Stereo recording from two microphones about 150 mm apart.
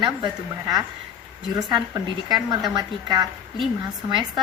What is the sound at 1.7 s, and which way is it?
Speech, 25° right (ahead or behind).